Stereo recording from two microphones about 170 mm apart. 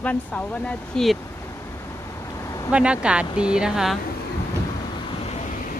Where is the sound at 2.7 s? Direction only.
5° right (ahead or behind).